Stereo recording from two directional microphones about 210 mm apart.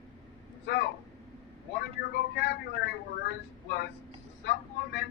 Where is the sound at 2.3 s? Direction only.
50° left (ahead or behind).